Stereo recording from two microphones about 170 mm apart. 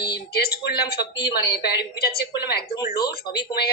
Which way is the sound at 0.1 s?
65° left (ahead or behind).